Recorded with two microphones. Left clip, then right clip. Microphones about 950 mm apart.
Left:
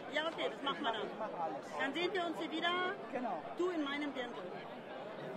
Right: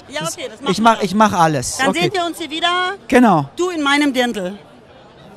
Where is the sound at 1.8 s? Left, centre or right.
Right.